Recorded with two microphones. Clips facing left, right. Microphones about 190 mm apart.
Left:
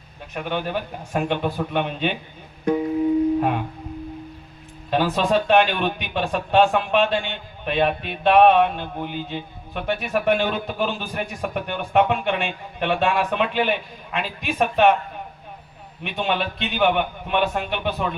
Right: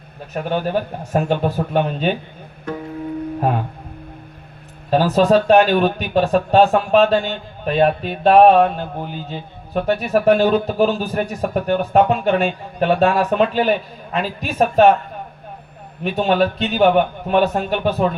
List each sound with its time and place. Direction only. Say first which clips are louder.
0.3 s a man's voice: right 5 dB; 40° right (ahead or behind)
2.7 s music: left 6 dB; 15° left (ahead or behind)
4.9 s a man's voice: right 6 dB; 40° right (ahead or behind)
16.0 s a man's voice: right 8 dB; 40° right (ahead or behind)